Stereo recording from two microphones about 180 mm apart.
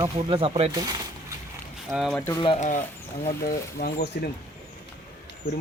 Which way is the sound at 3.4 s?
60° left (ahead or behind).